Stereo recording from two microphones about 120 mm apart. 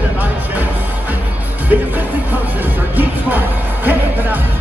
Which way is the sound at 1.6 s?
15° right (ahead or behind).